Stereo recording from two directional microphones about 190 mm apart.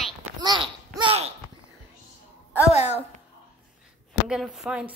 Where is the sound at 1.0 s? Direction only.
30° right (ahead or behind).